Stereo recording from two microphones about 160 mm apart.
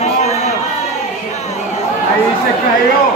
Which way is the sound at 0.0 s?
45° left (ahead or behind).